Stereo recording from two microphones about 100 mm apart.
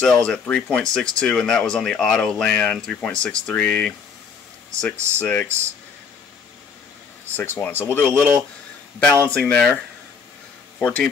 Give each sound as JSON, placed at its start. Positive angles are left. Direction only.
{"t": 0.0, "sound": "speech", "side_deg": 10}
{"t": 5.2, "sound": "speech", "side_deg": 15}
{"t": 7.3, "sound": "speech", "side_deg": 20}
{"t": 8.1, "sound": "speech", "side_deg": -20}
{"t": 9.2, "sound": "speech", "side_deg": 10}
{"t": 10.8, "sound": "speech", "side_deg": 10}